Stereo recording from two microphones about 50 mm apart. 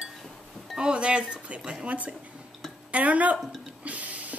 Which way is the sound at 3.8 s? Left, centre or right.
Right.